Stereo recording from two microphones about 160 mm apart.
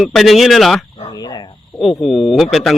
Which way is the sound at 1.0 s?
25° left (ahead or behind).